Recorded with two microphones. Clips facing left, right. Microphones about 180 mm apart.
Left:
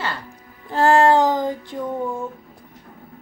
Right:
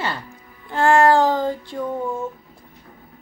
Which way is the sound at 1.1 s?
15° left (ahead or behind).